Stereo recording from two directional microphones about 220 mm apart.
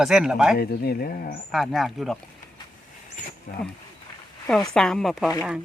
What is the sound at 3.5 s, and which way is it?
Speech, 40° left (ahead or behind).